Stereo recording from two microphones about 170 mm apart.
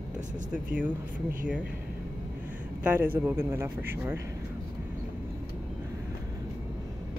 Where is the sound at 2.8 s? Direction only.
10° right (ahead or behind).